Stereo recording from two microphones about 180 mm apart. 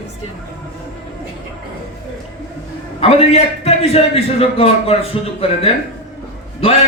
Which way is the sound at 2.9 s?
35° left (ahead or behind).